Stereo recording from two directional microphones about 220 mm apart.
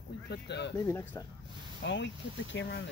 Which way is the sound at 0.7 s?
10° left (ahead or behind).